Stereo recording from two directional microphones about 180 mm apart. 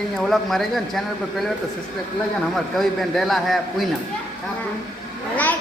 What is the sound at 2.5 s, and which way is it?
Speech, centre (ahead or behind).